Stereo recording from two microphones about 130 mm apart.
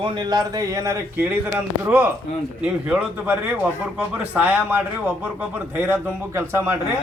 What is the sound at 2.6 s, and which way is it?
A man's voice, 10° right (ahead or behind).